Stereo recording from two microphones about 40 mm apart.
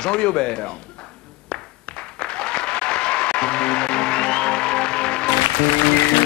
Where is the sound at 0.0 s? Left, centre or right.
Left.